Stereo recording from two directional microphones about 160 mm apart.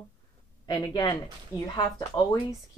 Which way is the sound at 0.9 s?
30° left (ahead or behind).